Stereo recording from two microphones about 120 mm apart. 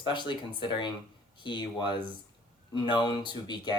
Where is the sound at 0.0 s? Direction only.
40° left (ahead or behind).